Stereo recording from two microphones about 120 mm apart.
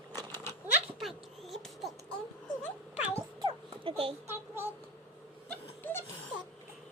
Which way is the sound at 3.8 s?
50° right (ahead or behind).